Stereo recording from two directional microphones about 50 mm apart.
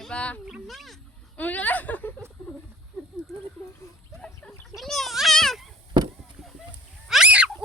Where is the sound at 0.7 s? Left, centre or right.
Centre.